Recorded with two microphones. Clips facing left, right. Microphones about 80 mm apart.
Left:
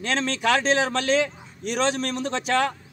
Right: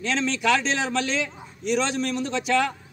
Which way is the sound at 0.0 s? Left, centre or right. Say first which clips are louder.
Even; left.